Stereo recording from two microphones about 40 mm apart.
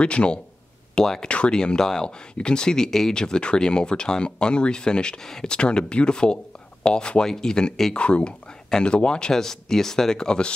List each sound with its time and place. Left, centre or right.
0.0 s speech: left
9.3 s speech: centre
10.1 s speech: left